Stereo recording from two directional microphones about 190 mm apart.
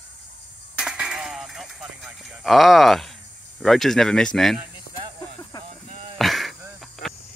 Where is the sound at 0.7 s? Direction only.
5° right (ahead or behind).